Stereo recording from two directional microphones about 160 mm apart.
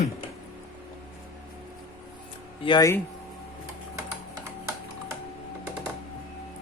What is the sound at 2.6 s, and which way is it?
Speech, 30° left (ahead or behind).